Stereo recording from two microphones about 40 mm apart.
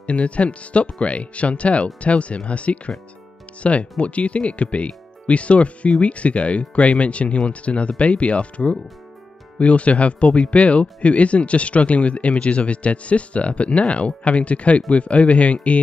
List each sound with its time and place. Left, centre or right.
0.0 s speech: left